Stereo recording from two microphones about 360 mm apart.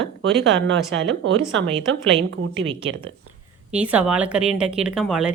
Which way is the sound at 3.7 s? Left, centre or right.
Centre.